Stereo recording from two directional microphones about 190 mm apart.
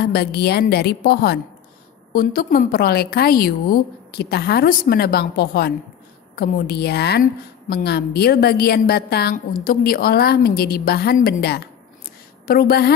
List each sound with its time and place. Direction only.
0.0 s a woman's voice: 55° left (ahead or behind)